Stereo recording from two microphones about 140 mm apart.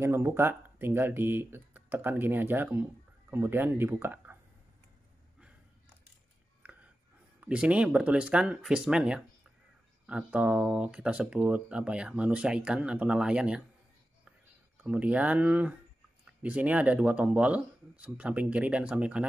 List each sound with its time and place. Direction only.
0.0 s speech: 20° right (ahead or behind)
6.6 s whispering: 10° right (ahead or behind)
7.3 s speech: 10° right (ahead or behind)
14.8 s speech: 10° right (ahead or behind)